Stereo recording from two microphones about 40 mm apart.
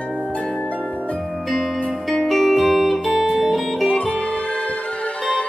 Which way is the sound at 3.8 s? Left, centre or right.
Left.